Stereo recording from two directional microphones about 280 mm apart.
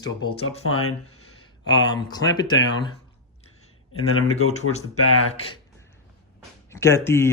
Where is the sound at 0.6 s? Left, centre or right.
Left.